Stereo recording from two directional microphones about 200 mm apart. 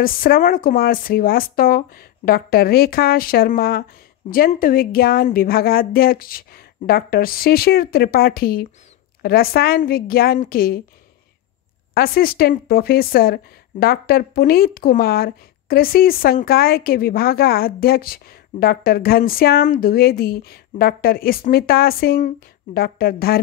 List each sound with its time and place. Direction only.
0.0 s speech: 45° left (ahead or behind)
11.9 s speech: 50° left (ahead or behind)